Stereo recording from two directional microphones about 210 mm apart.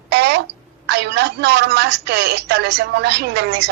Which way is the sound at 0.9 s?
55° right (ahead or behind).